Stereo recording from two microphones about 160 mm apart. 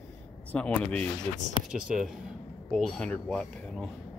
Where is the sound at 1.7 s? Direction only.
5° right (ahead or behind).